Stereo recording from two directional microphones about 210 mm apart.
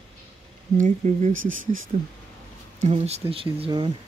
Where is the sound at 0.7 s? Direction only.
35° right (ahead or behind).